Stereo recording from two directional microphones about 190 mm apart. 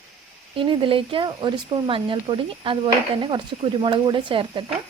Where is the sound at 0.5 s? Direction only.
25° right (ahead or behind).